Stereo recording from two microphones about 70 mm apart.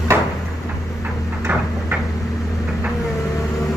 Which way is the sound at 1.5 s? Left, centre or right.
Right.